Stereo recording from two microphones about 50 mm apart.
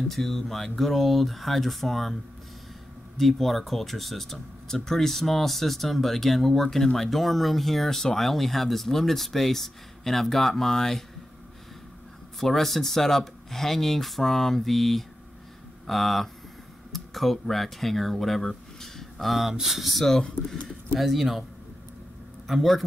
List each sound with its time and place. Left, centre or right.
0.1 s speech: centre
3.2 s speech: centre
12.4 s speech: centre
21.0 s speech: centre
22.5 s speech: centre